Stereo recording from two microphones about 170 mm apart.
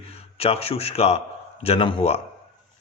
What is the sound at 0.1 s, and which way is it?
A man's voice, 35° left (ahead or behind).